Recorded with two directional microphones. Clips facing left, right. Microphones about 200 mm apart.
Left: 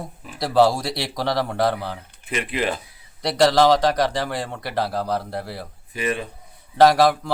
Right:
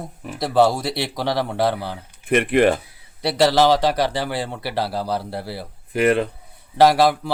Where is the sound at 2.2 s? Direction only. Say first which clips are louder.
Right 9 dB; 55° right (ahead or behind).